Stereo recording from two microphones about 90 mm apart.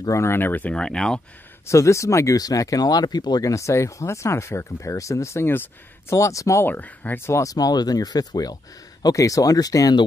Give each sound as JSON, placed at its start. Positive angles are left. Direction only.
{"t": 0.0, "sound": "speech", "side_deg": 30}
{"t": 1.7, "sound": "speech", "side_deg": 35}
{"t": 6.6, "sound": "speech", "side_deg": 20}
{"t": 7.2, "sound": "speech", "side_deg": 35}